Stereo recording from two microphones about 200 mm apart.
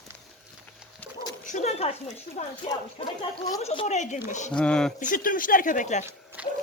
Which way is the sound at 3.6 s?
30° left (ahead or behind).